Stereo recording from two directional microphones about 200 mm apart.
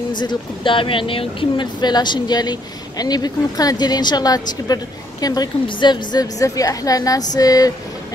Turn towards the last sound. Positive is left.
turn(degrees=20)  # may be behind; listen again after turning